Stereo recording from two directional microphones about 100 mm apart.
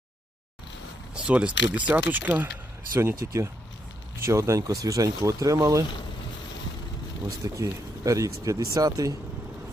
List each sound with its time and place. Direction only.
1.1 s speech: 10° right (ahead or behind); by 5.8 s 30° right (ahead or behind)
7.4 s speech: 35° right (ahead or behind)